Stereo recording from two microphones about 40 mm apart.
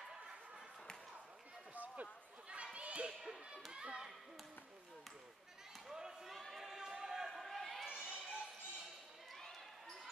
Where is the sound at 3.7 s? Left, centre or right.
Right.